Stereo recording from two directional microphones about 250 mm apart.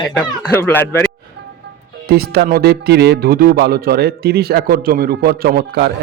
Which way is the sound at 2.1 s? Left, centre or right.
Right.